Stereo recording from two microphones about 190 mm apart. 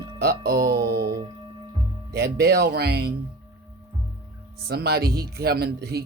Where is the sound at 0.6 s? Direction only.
20° right (ahead or behind).